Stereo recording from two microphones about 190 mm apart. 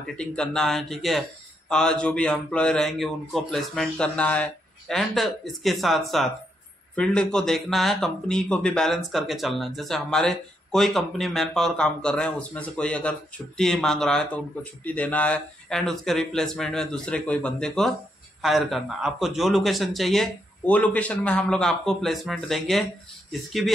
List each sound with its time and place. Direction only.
0.0 s speech: 5° left (ahead or behind)